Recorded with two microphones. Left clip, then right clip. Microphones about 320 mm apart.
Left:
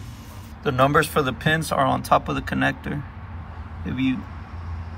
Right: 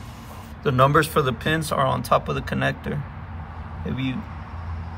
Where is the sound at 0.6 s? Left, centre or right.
Centre.